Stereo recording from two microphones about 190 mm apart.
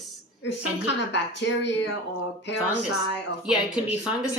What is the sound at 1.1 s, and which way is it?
Speech, 65° left (ahead or behind).